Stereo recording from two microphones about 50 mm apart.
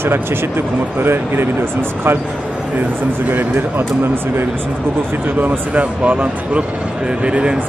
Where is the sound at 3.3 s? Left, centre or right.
Right.